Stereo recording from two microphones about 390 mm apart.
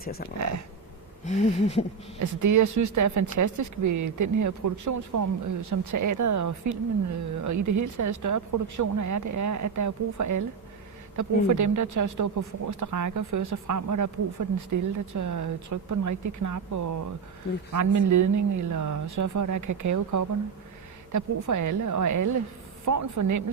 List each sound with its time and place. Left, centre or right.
0.0 s speech: left
1.2 s a sound: centre
2.1 s speech: right